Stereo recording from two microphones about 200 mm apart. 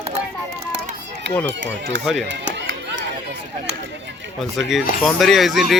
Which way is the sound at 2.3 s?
65° right (ahead or behind).